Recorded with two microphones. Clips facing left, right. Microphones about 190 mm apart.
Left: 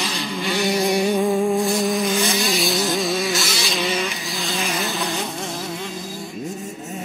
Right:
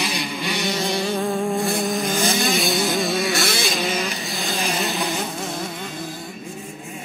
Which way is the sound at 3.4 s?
55° right (ahead or behind).